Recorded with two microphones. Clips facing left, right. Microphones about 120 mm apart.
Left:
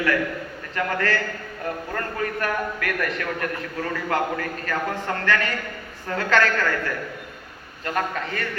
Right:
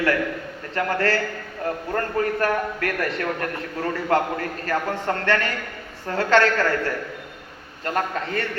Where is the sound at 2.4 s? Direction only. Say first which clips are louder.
Right 3 dB; 30° right (ahead or behind).